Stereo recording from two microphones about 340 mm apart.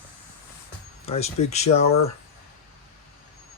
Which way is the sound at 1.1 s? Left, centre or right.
Centre.